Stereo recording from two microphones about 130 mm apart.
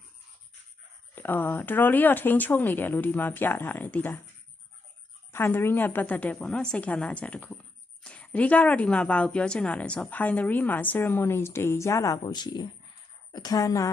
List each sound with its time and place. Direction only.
1.1 s speech: 15° left (ahead or behind)
5.3 s a woman's voice: 15° left (ahead or behind)